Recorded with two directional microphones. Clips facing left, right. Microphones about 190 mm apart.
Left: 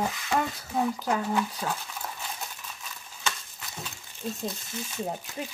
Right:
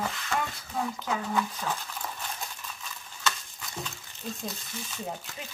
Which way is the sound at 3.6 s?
5° left (ahead or behind).